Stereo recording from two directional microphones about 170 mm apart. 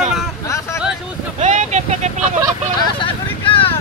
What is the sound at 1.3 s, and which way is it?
Vehicle, 45° right (ahead or behind).